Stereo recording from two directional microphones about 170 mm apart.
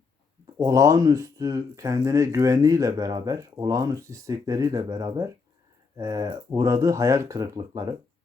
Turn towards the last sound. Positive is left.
turn(degrees=-20)  # may be behind; listen again after turning